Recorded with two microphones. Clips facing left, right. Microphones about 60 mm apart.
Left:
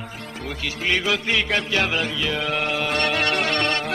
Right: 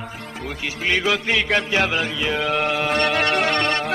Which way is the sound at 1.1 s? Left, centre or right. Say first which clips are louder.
Right 2 dB; centre.